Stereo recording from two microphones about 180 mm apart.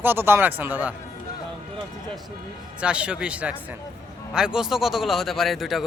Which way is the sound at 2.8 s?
5° right (ahead or behind).